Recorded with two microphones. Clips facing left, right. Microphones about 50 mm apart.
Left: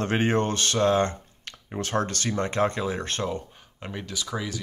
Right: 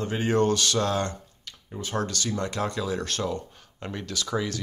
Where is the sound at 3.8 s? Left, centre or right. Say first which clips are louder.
Right 1 dB; centre.